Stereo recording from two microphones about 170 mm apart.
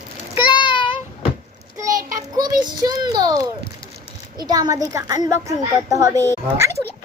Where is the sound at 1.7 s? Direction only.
20° right (ahead or behind).